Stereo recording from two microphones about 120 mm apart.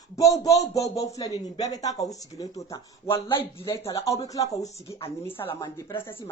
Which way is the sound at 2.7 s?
45° left (ahead or behind).